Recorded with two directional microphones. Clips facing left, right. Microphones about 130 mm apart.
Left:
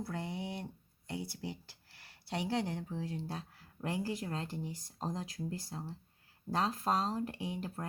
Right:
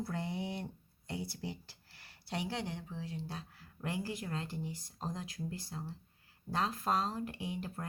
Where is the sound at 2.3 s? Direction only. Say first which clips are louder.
Left 3 dB; 30° left (ahead or behind).